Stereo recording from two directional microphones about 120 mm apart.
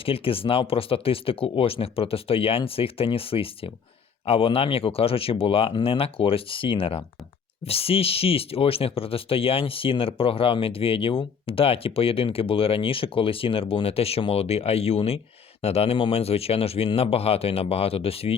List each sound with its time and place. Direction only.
0.0 s speech: 50° left (ahead or behind)